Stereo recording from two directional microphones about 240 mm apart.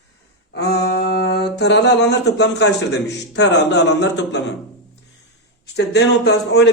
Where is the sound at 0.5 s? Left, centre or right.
Left.